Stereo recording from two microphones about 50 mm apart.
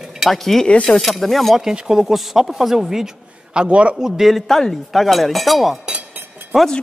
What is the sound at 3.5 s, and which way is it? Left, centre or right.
Speech, right.